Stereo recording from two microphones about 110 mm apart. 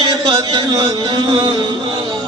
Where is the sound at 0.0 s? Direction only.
40° right (ahead or behind).